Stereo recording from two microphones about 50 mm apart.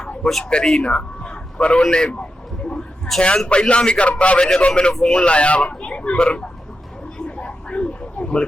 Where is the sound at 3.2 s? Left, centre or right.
Centre.